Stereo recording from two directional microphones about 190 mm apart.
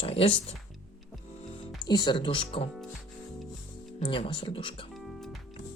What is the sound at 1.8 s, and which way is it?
Speech, 25° left (ahead or behind).